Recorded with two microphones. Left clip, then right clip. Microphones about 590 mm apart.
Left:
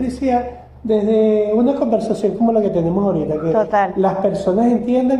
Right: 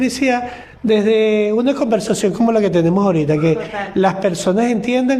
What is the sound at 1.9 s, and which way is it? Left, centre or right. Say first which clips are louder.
Speech: right 1 dB; right.